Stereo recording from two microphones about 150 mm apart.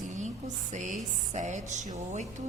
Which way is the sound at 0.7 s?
55° right (ahead or behind).